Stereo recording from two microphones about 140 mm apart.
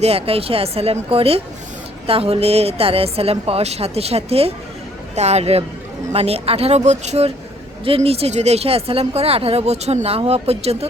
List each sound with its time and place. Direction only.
0.0 s speech: 45° right (ahead or behind)